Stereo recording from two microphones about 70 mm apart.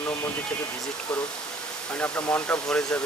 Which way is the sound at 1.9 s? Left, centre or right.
Left.